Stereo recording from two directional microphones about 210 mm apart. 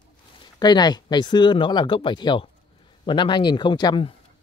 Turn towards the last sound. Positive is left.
turn(degrees=20)  # may be behind; listen again after turning